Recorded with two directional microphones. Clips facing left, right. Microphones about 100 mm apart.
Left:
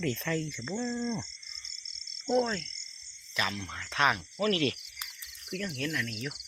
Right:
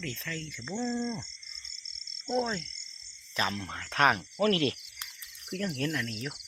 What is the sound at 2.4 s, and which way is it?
Speech, 15° right (ahead or behind).